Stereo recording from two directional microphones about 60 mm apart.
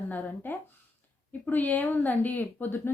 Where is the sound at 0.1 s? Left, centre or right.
Left.